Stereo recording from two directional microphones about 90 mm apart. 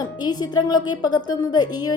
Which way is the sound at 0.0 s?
50° left (ahead or behind).